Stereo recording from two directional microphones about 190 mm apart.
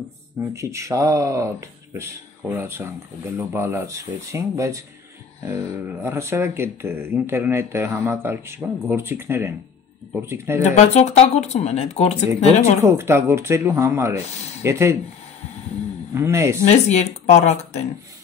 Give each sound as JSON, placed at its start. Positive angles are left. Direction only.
{"t": 0.4, "sound": "speech", "side_deg": -15}
{"t": 10.6, "sound": "speech", "side_deg": 35}
{"t": 12.8, "sound": "speech", "side_deg": -10}
{"t": 16.2, "sound": "speech", "side_deg": -15}
{"t": 16.6, "sound": "speech", "side_deg": 35}